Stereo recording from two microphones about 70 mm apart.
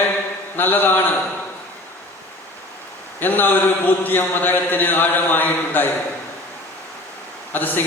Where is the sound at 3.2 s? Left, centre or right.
Left.